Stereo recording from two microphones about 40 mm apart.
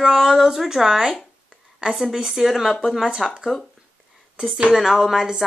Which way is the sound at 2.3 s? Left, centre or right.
Centre.